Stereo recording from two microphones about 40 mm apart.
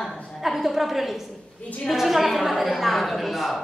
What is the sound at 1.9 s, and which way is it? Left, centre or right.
A woman's voice, centre.